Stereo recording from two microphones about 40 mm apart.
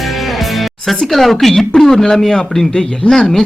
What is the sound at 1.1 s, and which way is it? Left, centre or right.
Speech, centre.